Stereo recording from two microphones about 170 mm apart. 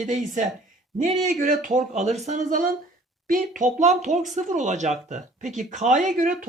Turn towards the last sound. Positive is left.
turn(degrees=-50)  # may be behind; listen again after turning